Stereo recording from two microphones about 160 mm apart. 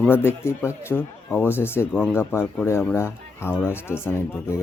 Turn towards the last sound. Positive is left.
turn(degrees=15)  # may be behind; listen again after turning